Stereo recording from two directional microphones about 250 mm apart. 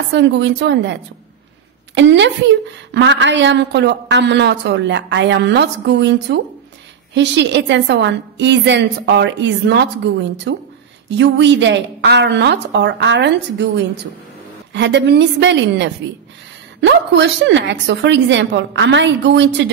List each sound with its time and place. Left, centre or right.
0.1 s a woman's voice: right
2.0 s a woman's voice: right
14.7 s a woman's voice: right